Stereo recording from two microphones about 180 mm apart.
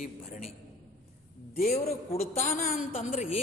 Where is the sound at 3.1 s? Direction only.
40° left (ahead or behind).